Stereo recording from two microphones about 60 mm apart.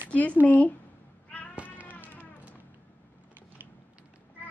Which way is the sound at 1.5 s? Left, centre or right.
Right.